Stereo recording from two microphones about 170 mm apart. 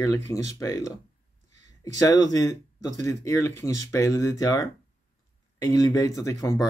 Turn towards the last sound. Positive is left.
turn(degrees=20)  # may be behind; listen again after turning